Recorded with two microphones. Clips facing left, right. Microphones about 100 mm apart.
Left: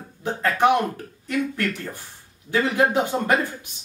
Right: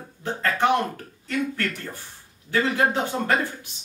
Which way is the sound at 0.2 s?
15° left (ahead or behind).